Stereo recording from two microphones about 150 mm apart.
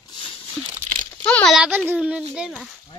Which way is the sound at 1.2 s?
10° left (ahead or behind).